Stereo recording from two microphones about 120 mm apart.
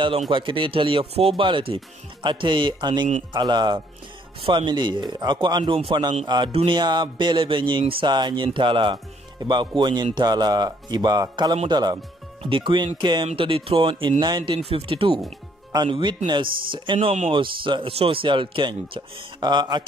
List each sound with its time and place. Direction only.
0.3 s speech: 45° right (ahead or behind)